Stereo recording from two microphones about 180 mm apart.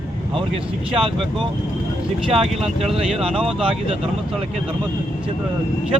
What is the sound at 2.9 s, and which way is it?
Speech, 30° right (ahead or behind).